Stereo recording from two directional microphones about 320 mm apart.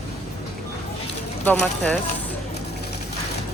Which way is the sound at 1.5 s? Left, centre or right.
Centre.